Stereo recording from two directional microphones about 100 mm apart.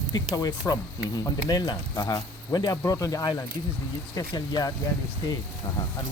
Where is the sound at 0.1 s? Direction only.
40° left (ahead or behind).